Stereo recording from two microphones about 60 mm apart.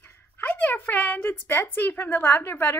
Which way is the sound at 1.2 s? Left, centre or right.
Left.